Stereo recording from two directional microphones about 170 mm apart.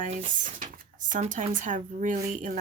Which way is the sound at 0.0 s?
45° right (ahead or behind).